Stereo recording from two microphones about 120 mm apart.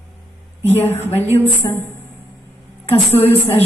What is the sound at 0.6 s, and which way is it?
Speech, 15° left (ahead or behind).